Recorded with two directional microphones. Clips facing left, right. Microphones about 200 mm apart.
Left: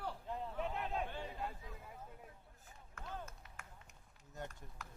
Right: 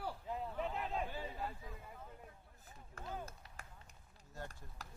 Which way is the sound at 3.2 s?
35° right (ahead or behind).